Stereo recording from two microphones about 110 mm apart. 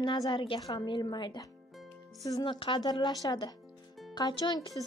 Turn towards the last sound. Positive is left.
turn(degrees=40)  # may be behind; listen again after turning